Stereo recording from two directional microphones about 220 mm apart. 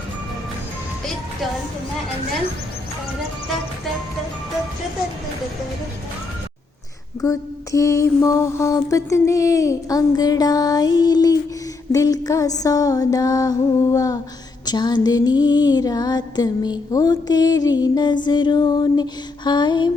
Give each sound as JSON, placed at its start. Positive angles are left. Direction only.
{"t": 7.2, "sound": "mantra", "side_deg": 15}
{"t": 14.6, "sound": "music", "side_deg": 20}